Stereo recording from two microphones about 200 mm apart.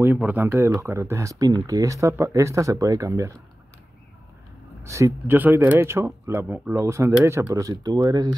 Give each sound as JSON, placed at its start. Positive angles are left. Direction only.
{"t": 0.0, "sound": "speech", "side_deg": -10}
{"t": 4.8, "sound": "speech", "side_deg": -15}